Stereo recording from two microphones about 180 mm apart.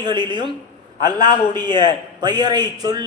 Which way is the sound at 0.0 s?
25° right (ahead or behind).